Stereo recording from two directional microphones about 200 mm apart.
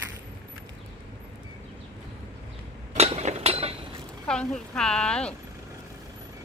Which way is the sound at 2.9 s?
30° right (ahead or behind).